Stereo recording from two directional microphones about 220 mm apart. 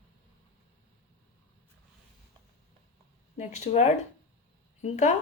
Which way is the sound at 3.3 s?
30° left (ahead or behind).